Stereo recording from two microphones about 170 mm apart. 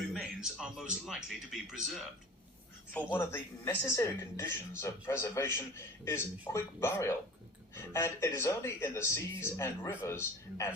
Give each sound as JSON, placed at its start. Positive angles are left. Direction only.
{"t": 0.1, "sound": "speech", "side_deg": -5}
{"t": 2.9, "sound": "a woman's voice", "side_deg": 15}